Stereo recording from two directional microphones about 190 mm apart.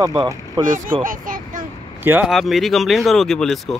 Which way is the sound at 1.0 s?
45° right (ahead or behind).